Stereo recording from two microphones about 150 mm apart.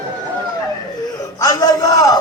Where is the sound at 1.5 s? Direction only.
20° left (ahead or behind).